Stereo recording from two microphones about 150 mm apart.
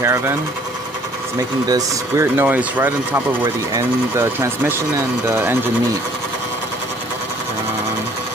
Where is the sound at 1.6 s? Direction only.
25° right (ahead or behind).